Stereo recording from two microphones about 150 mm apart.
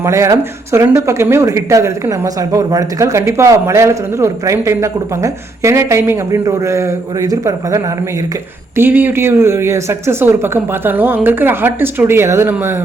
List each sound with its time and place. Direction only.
0.0 s speech: 20° right (ahead or behind)